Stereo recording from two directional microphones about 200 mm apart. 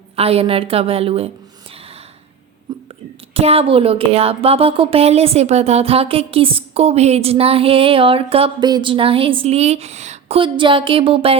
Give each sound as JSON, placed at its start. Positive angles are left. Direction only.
{"t": 0.2, "sound": "speech", "side_deg": -30}
{"t": 2.7, "sound": "whispering", "side_deg": -20}
{"t": 3.3, "sound": "speech", "side_deg": -30}